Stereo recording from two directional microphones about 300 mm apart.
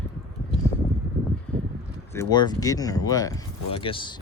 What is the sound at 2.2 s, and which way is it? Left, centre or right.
Speech, centre.